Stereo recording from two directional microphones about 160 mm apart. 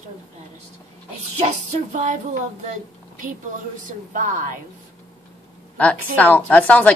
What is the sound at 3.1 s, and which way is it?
A woman's voice, 55° right (ahead or behind).